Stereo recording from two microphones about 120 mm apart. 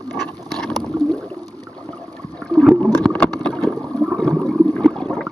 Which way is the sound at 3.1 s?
10° left (ahead or behind).